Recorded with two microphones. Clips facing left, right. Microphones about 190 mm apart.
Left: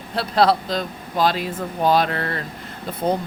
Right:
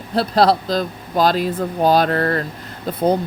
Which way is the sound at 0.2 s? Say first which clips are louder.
Right 3 dB; 35° right (ahead or behind).